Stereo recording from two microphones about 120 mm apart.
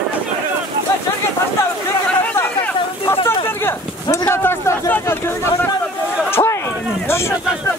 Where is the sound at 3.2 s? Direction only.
20° left (ahead or behind).